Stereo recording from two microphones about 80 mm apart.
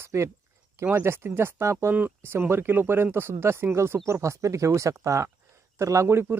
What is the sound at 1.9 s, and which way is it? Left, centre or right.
Speech, right.